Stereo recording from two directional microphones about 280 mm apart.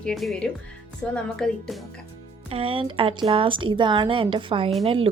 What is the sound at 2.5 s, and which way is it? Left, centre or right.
A woman's voice, centre.